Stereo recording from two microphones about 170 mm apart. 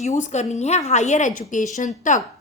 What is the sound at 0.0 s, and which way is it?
A woman's voice, 45° left (ahead or behind).